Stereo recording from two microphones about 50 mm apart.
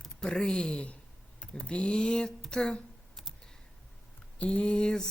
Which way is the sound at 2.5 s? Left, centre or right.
Centre.